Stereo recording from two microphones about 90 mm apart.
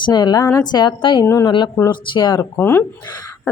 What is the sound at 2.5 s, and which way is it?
Speech, 30° left (ahead or behind).